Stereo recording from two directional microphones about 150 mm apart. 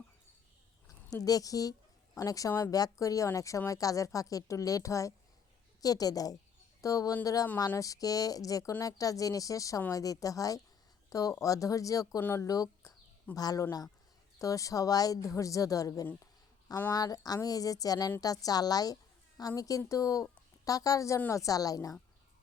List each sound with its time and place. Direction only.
0.9 s a woman's voice: 25° left (ahead or behind)